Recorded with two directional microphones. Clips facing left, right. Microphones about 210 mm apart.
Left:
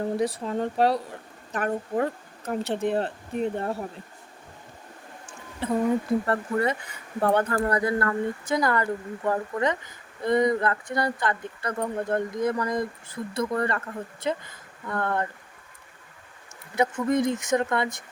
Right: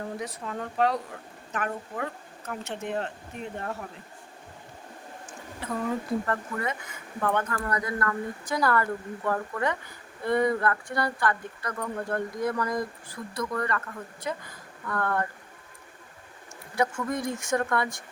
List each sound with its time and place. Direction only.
0.0 s speech: 30° left (ahead or behind)
5.6 s speech: 25° left (ahead or behind)
16.7 s speech: 20° left (ahead or behind)